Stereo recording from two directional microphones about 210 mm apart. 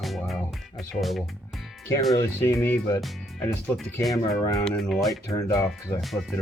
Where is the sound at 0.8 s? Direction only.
Centre (ahead or behind).